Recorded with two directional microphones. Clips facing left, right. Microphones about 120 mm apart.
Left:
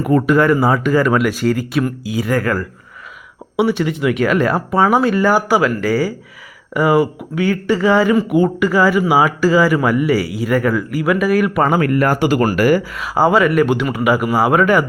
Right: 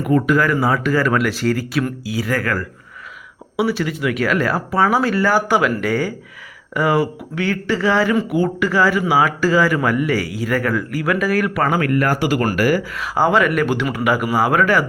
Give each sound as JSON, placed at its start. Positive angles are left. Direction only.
{"t": 0.0, "sound": "speech", "side_deg": 35}